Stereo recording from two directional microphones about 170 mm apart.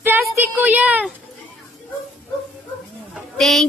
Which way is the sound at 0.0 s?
10° right (ahead or behind).